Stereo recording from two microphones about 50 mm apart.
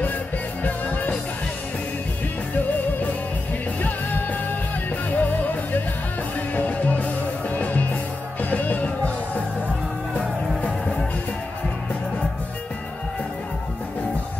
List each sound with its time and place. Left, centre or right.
0.7 s music: left
3.8 s music: left
10.1 s music: left